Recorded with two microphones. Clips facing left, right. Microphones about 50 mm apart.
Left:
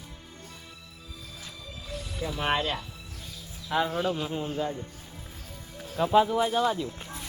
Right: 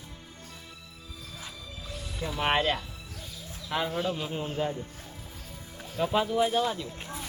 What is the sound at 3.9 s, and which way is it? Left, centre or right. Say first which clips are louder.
Speech: left 2 dB; centre.